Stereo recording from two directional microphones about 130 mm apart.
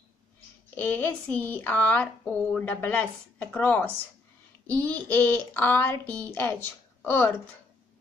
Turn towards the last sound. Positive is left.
turn(degrees=15)  # may be behind; listen again after turning